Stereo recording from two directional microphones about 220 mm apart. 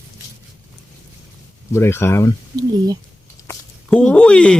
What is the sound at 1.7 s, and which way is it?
Speech, 10° left (ahead or behind).